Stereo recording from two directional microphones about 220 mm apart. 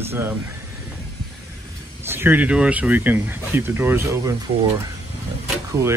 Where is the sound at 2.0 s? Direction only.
10° right (ahead or behind).